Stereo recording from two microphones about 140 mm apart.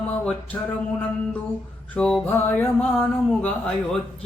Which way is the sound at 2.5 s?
15° left (ahead or behind).